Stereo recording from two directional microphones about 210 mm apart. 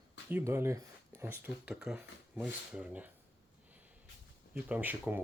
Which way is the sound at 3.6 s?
5° right (ahead or behind).